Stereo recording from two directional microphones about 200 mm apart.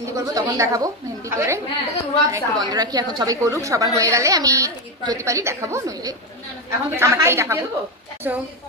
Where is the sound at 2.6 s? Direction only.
20° right (ahead or behind).